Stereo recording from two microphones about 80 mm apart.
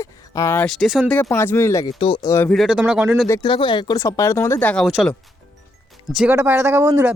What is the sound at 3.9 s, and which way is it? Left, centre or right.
Speech, left.